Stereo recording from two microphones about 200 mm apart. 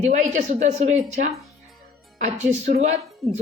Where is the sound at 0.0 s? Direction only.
35° right (ahead or behind).